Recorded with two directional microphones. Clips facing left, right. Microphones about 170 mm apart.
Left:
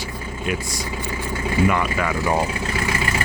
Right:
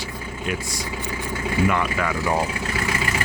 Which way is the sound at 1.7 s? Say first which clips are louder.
Left 1 dB; 15° left (ahead or behind).